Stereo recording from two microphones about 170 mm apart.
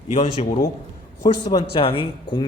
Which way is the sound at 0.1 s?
35° left (ahead or behind).